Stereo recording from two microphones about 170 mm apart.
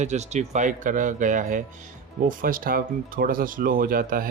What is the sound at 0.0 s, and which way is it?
Speech, 40° right (ahead or behind).